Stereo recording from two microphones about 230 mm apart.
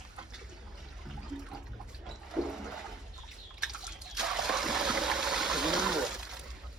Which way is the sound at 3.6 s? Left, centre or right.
Centre.